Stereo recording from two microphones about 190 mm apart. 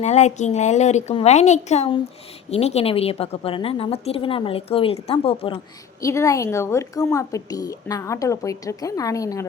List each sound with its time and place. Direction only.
0.0 s a woman's voice: 35° left (ahead or behind)
6.0 s a woman's voice: 15° left (ahead or behind)